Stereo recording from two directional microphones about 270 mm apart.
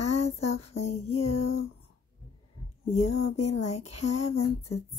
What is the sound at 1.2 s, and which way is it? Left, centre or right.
Speech, left.